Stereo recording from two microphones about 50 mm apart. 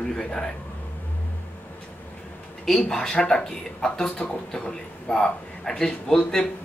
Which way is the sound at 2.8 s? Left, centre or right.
Centre.